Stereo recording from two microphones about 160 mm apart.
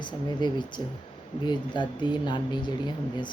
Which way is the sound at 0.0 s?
30° left (ahead or behind).